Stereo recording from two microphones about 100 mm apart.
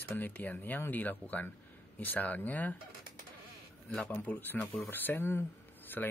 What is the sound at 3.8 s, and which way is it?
Speech, 15° left (ahead or behind).